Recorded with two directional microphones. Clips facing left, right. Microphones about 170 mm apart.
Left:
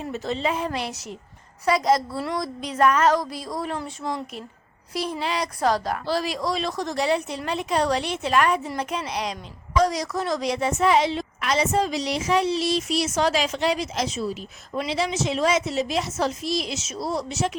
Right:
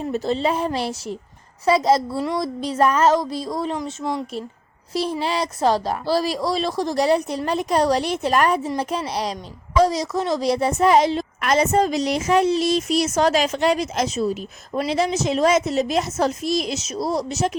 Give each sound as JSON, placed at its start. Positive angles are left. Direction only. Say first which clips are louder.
{"t": 0.0, "sound": "speech", "louder": "right 5 dB", "side_deg": -35}
{"t": 1.6, "sound": "a sound", "louder": "right 3 dB", "side_deg": -30}
{"t": 5.2, "sound": "speech", "louder": "right 2 dB", "side_deg": -30}
{"t": 8.6, "sound": "a woman's voice", "louder": "right 4 dB", "side_deg": -30}